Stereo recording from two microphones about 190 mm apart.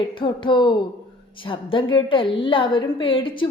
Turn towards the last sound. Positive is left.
turn(degrees=25)  # may be behind; listen again after turning